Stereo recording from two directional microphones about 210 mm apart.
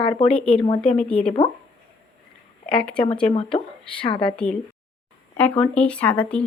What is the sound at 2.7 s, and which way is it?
Speech, 5° left (ahead or behind).